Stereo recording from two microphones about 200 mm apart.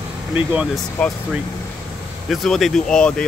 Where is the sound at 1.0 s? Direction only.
5° left (ahead or behind).